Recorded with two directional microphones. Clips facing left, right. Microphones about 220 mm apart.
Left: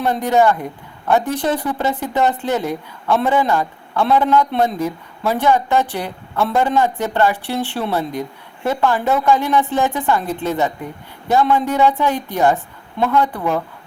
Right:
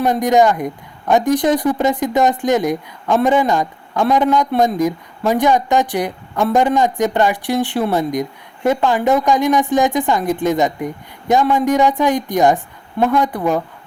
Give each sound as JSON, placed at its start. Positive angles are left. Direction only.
{"t": 0.0, "sound": "speech", "side_deg": -15}